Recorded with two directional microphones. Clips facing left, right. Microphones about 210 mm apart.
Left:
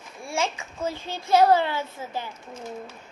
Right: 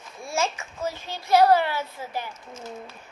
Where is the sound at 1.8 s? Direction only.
10° right (ahead or behind).